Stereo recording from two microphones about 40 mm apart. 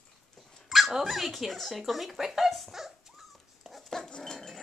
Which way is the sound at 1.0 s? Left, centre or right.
Centre.